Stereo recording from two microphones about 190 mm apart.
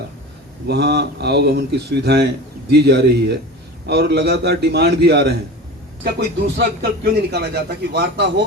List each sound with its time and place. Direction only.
0.7 s a man's voice: 60° right (ahead or behind)